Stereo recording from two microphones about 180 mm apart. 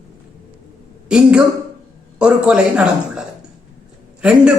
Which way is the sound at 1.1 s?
5° right (ahead or behind).